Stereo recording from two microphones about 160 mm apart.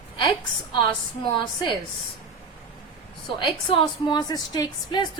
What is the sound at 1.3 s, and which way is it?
Speech, 30° left (ahead or behind).